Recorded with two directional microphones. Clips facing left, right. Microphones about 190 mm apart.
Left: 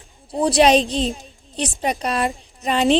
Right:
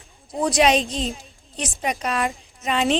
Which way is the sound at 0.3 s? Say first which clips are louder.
Left 4 dB; 30° left (ahead or behind).